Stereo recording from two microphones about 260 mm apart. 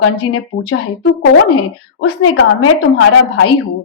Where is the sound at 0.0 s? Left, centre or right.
Left.